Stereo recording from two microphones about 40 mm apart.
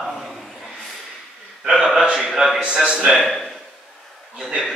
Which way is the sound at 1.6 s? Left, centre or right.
Centre.